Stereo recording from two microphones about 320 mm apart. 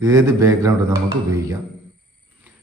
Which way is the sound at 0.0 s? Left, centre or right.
Centre.